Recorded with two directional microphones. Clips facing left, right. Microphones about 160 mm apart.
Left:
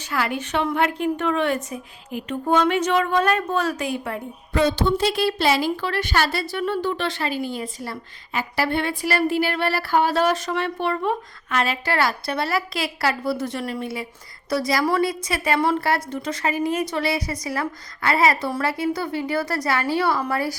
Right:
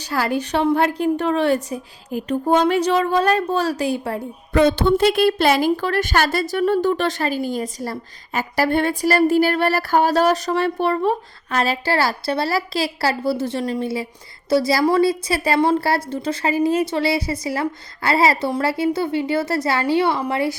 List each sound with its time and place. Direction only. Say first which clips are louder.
0.0 s a woman's voice: right 4 dB; 35° right (ahead or behind)
4.5 s a woman's voice: right 5 dB; 55° right (ahead or behind); by 20.6 s 25° right (ahead or behind)